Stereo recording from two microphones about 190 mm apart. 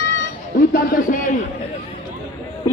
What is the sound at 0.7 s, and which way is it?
Speech, 45° left (ahead or behind).